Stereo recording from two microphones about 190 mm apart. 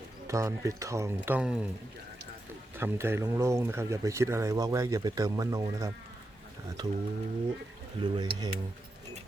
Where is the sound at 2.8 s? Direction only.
10° right (ahead or behind).